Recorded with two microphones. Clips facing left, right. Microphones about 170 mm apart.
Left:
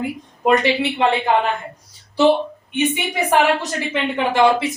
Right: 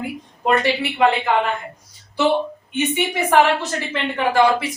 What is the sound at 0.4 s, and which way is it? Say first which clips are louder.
Speech: left 2 dB; 20° left (ahead or behind).